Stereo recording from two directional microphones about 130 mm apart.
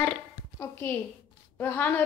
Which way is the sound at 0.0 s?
15° left (ahead or behind).